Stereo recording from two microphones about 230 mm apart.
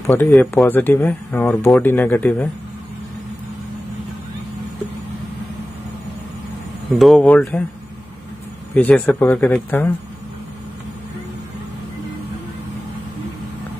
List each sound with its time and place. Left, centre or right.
0.0 s speech: centre
7.0 s speech: centre
8.7 s speech: centre